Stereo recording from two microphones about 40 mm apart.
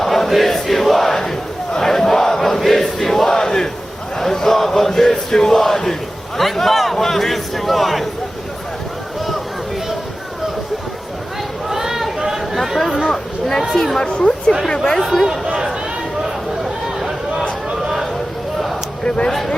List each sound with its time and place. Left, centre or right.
0.0 s battle cry: centre
4.2 s a sound: centre
4.9 s crowd: centre
11.7 s chatter: centre
13.8 s speech: centre
15.1 s speech: centre
19.0 s speech: left
19.3 s speech: centre